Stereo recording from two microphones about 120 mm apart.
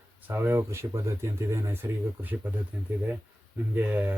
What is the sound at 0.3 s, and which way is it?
A man's voice, 20° right (ahead or behind).